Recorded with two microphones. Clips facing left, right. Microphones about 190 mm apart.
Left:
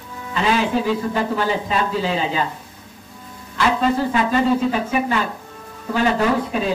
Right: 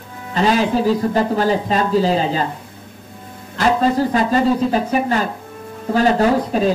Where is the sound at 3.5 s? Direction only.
40° right (ahead or behind).